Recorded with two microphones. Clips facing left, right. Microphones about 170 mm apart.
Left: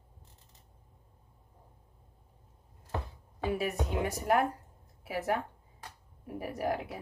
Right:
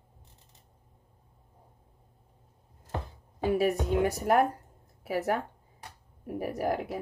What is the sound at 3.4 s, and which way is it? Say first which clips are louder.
Speech: right 6 dB; 40° right (ahead or behind).